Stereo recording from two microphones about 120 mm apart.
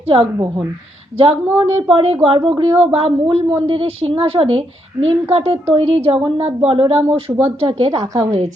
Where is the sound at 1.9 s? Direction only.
50° right (ahead or behind).